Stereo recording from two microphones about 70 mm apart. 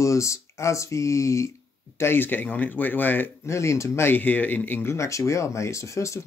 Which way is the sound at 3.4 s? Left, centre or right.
Left.